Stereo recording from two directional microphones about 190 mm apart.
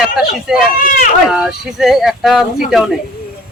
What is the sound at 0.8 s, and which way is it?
Speech, 45° left (ahead or behind).